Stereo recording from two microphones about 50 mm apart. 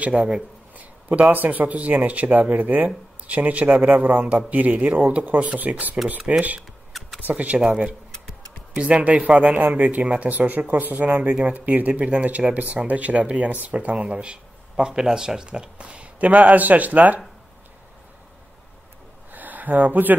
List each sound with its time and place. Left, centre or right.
0.0 s speech: right
0.7 s a sound: right
1.3 s speech: right
6.9 s a sound: centre
7.2 s speech: right
7.6 s speech: centre
8.7 s speech: right
9.6 s speech: right
19.3 s a sound: right